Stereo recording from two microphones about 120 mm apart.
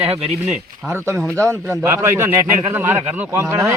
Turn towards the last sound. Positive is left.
turn(degrees=-20)  # may be behind; listen again after turning